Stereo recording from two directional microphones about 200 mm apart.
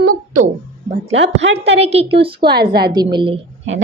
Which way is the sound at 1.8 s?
30° right (ahead or behind).